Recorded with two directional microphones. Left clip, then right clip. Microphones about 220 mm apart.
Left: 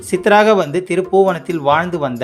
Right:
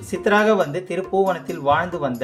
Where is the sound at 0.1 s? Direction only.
40° left (ahead or behind).